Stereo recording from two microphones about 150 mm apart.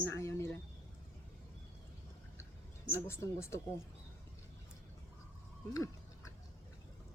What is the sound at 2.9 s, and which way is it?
Speech, 15° left (ahead or behind).